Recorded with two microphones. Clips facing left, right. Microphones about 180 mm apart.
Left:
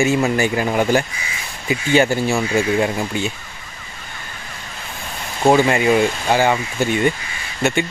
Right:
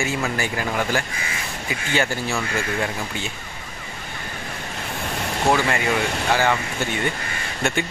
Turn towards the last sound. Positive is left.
turn(degrees=5)  # may be behind; listen again after turning